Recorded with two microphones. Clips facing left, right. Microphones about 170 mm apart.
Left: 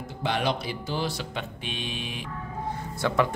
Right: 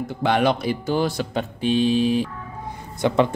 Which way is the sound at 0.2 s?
55° right (ahead or behind).